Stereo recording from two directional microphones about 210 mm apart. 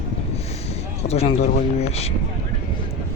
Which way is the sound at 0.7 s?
30° left (ahead or behind).